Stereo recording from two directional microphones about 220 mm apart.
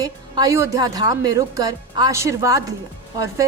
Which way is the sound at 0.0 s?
15° right (ahead or behind).